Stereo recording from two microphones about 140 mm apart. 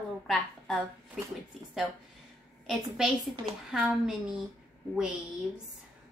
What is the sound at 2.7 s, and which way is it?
A woman's voice, 5° right (ahead or behind).